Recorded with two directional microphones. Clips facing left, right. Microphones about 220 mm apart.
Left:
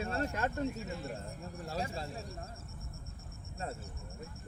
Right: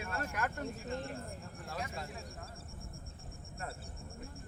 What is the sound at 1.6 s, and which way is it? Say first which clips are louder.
Speech: left 4 dB; 30° left (ahead or behind).